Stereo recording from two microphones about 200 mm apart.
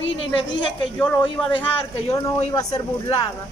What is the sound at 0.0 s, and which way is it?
Speech, 70° left (ahead or behind).